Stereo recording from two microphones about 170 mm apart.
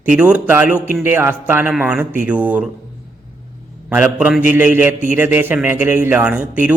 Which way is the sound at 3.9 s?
10° right (ahead or behind).